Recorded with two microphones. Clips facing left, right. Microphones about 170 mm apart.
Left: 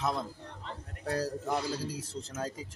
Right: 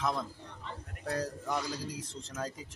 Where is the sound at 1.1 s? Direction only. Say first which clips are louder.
Left 2 dB; 30° left (ahead or behind).